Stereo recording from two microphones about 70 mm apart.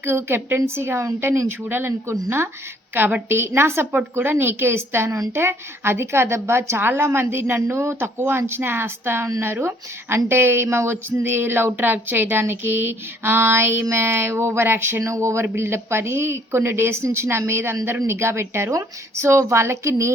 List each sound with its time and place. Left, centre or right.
0.0 s speech: right